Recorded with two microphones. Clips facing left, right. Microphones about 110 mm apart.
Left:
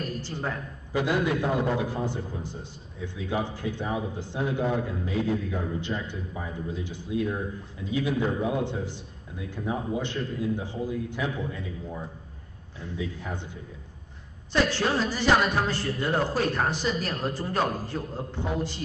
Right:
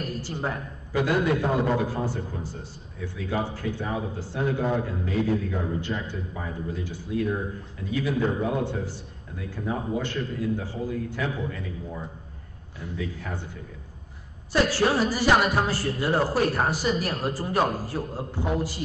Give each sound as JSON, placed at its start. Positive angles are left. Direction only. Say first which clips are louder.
{"t": 0.0, "sound": "a woman's voice", "louder": "right 2 dB", "side_deg": -15}
{"t": 0.9, "sound": "a man's voice", "louder": "right 2 dB", "side_deg": 20}
{"t": 1.3, "sound": "a man's voice", "louder": "right 2 dB", "side_deg": -20}
{"t": 2.0, "sound": "a man's voice", "louder": "right 1 dB", "side_deg": 20}
{"t": 12.9, "sound": "a man's voice", "louder": "even", "side_deg": 20}
{"t": 14.5, "sound": "a man's voice", "louder": "right 2 dB", "side_deg": -10}